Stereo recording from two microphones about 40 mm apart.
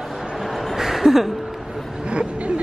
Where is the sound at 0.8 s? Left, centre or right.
Centre.